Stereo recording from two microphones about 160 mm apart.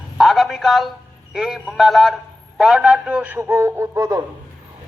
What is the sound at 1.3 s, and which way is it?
A man's voice, centre (ahead or behind).